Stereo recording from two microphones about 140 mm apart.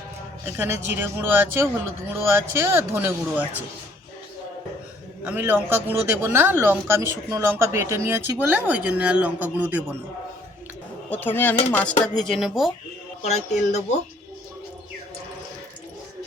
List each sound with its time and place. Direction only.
0.5 s speech: 15° right (ahead or behind)
5.2 s speech: 15° right (ahead or behind)
11.1 s speech: 15° left (ahead or behind)
13.2 s speech: 55° left (ahead or behind)